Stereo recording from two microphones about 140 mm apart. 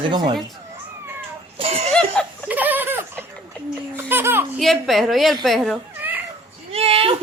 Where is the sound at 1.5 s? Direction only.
45° right (ahead or behind).